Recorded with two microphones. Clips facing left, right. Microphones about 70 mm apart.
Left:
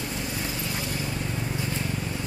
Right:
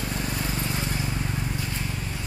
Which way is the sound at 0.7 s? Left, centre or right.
Right.